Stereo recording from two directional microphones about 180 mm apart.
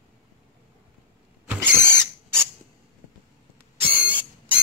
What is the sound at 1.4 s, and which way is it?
Owl, 15° right (ahead or behind).